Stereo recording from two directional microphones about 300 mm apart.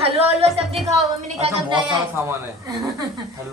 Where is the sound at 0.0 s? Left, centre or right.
Centre.